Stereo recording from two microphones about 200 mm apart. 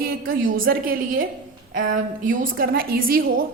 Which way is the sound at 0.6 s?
45° right (ahead or behind).